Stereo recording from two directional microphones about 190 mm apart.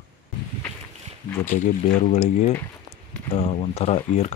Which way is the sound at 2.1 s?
35° left (ahead or behind).